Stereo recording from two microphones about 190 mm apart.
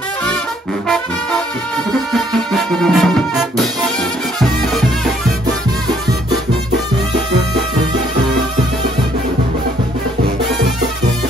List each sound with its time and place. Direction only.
1.9 s music: centre (ahead or behind)